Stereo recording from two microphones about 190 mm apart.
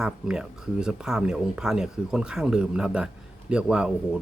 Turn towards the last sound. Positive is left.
turn(degrees=-5)  # may be behind; listen again after turning